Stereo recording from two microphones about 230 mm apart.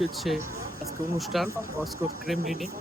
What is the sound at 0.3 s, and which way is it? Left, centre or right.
Speech, centre.